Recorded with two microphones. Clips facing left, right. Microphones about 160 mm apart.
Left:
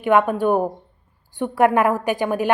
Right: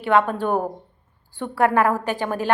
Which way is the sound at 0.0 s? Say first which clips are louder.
Left 2 dB; 15° left (ahead or behind).